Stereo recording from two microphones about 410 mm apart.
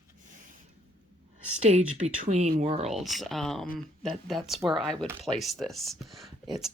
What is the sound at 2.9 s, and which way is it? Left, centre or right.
Speech, centre.